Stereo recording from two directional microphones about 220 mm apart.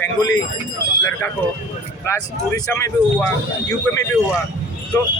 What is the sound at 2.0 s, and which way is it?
Speech, 10° left (ahead or behind).